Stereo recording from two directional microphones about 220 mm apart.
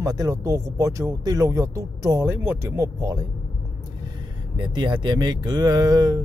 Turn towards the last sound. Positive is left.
turn(degrees=-15)  # may be behind; listen again after turning